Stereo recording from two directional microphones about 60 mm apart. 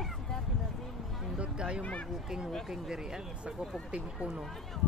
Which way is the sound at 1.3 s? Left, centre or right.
Centre.